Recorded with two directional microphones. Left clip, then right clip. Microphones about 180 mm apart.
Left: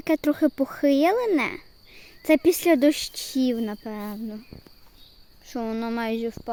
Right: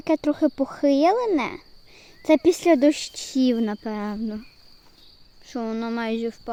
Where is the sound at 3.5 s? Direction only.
25° right (ahead or behind).